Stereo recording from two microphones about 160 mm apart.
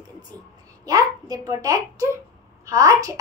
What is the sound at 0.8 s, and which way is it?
A child's voice, 25° right (ahead or behind).